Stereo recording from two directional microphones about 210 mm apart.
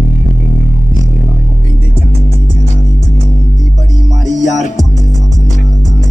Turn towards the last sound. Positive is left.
turn(degrees=35)  # may be behind; listen again after turning